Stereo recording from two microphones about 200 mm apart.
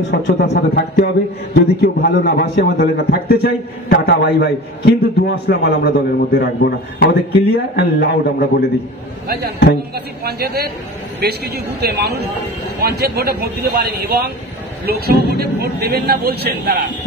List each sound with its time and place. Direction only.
0.1 s a man's voice: 55° left (ahead or behind)
9.9 s a man's voice: 50° right (ahead or behind)